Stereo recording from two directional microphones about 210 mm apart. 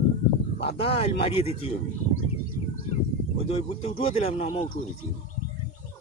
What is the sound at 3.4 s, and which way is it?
Speech, 30° left (ahead or behind).